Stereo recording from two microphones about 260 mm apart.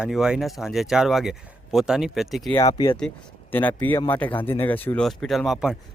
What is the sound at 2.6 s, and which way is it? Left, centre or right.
Speech, centre.